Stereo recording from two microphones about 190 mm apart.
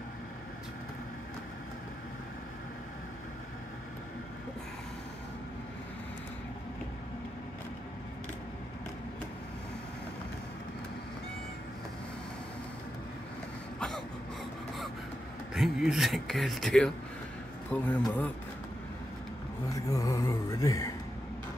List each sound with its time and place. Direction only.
13.7 s throat clearing: 5° left (ahead or behind)
15.5 s speech: centre (ahead or behind)
19.7 s speech: 15° left (ahead or behind)